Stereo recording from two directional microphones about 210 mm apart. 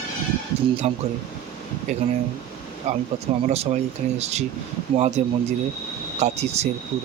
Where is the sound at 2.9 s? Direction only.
35° right (ahead or behind).